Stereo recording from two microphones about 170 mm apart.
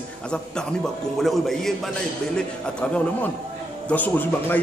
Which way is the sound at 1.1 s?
Centre (ahead or behind).